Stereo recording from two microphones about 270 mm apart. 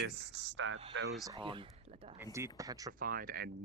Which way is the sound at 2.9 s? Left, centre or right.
Right.